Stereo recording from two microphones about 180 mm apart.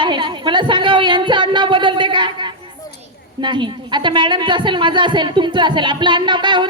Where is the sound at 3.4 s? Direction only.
25° right (ahead or behind).